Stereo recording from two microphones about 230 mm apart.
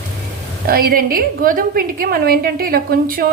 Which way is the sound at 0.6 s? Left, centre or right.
Right.